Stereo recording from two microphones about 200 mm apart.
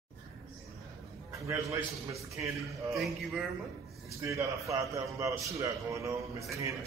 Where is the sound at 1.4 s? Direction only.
15° right (ahead or behind).